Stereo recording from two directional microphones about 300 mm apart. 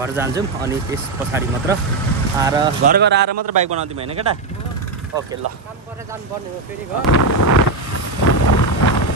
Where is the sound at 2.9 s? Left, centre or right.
Right.